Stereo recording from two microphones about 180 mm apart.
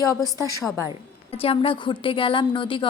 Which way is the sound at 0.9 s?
30° left (ahead or behind).